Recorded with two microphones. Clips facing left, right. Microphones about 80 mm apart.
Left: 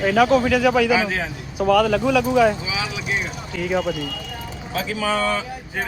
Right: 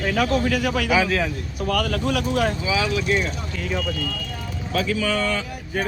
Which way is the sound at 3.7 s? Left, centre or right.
Left.